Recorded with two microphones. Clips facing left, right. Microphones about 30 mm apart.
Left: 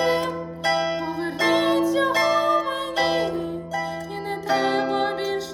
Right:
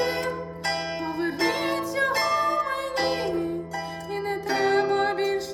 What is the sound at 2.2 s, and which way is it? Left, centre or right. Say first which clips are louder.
Music: left 4 dB; left.